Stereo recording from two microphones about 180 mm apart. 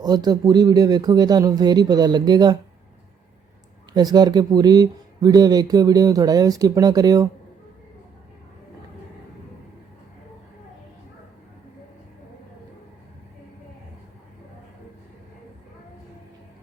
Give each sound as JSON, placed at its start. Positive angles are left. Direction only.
{"t": 0.0, "sound": "speech", "side_deg": -20}
{"t": 3.9, "sound": "speech", "side_deg": -20}